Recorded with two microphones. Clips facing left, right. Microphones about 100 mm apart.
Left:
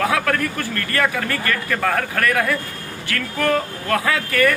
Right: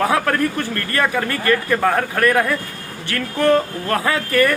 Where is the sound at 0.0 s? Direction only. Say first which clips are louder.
Right 2 dB; 30° right (ahead or behind).